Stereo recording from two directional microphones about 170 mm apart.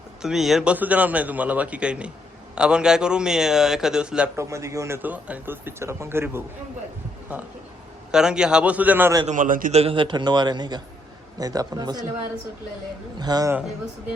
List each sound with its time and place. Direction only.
0.2 s a man's voice: 5° right (ahead or behind)
4.4 s a man's voice: 15° right (ahead or behind)
8.1 s a man's voice: 5° right (ahead or behind)
9.2 s a man's voice: 50° right (ahead or behind)
9.7 s a man's voice: 35° right (ahead or behind)
13.1 s a man's voice: 25° right (ahead or behind)